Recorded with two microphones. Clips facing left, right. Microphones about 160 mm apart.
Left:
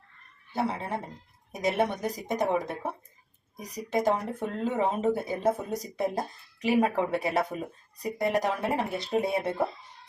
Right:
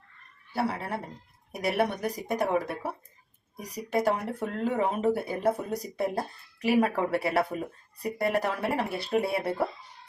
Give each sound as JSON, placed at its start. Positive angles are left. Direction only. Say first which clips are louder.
{"t": 0.5, "sound": "speech", "louder": "even", "side_deg": 20}
{"t": 4.0, "sound": "speech", "louder": "left 1 dB", "side_deg": 20}